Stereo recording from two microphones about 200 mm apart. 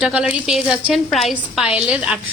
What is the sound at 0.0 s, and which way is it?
A woman's voice, 5° right (ahead or behind).